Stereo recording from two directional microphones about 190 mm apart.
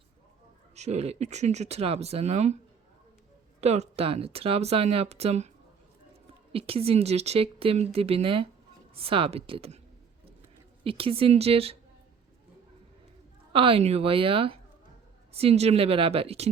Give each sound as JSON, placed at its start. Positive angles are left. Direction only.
{"t": 0.8, "sound": "speech", "side_deg": -35}
{"t": 3.6, "sound": "speech", "side_deg": -35}
{"t": 6.5, "sound": "a woman's voice", "side_deg": -30}
{"t": 10.8, "sound": "speech", "side_deg": -30}
{"t": 13.5, "sound": "a woman's voice", "side_deg": -30}